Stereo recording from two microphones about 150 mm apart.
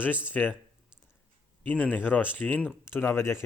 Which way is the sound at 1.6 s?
10° left (ahead or behind).